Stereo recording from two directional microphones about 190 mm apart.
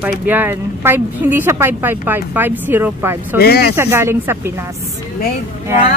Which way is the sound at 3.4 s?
55° left (ahead or behind).